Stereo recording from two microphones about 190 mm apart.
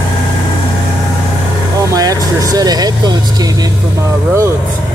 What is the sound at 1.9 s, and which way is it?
Speech, 20° right (ahead or behind).